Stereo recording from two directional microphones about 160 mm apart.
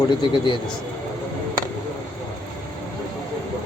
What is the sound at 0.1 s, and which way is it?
Speech, 30° left (ahead or behind).